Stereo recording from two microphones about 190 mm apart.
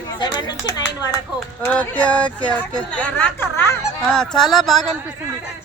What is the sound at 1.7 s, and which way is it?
A woman's voice, 5° left (ahead or behind).